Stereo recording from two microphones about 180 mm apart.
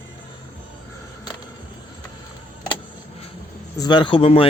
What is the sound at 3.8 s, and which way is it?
Speech, 25° left (ahead or behind).